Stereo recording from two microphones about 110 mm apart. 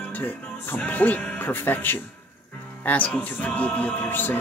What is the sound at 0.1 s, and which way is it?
Music, 15° left (ahead or behind).